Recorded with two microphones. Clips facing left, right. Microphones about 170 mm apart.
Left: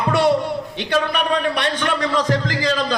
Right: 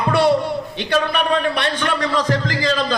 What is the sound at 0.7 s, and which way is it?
A man's voice, 15° left (ahead or behind).